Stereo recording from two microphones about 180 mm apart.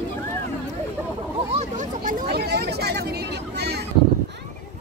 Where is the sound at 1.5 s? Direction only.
45° right (ahead or behind).